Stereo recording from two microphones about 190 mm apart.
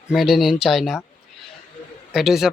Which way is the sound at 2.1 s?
Centre (ahead or behind).